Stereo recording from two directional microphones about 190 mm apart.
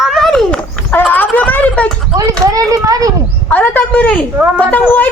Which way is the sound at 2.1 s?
20° right (ahead or behind).